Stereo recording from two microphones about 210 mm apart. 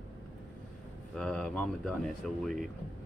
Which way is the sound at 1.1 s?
5° left (ahead or behind).